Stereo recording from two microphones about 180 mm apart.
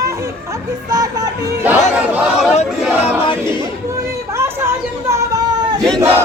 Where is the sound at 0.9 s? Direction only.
20° right (ahead or behind).